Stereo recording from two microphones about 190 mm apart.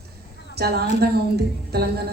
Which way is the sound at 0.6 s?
55° right (ahead or behind).